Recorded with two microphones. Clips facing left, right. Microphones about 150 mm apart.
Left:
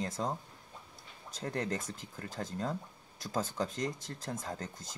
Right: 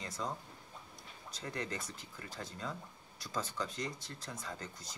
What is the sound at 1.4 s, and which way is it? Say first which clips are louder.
Speech: left 6 dB; 50° left (ahead or behind).